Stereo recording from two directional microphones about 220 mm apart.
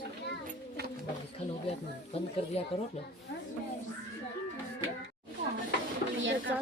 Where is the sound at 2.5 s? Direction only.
25° left (ahead or behind).